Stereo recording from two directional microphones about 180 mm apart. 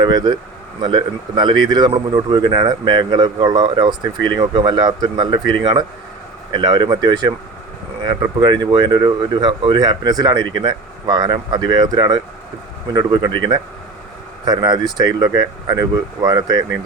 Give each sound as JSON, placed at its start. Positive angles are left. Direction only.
{"t": 0.0, "sound": "speech", "side_deg": -25}